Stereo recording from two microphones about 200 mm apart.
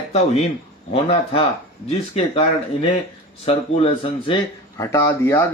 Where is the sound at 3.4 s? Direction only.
30° left (ahead or behind).